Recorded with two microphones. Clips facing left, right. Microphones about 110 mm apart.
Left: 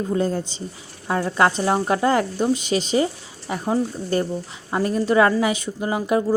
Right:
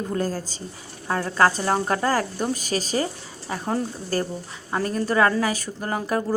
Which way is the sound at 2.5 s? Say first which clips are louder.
Left 5 dB; 40° right (ahead or behind).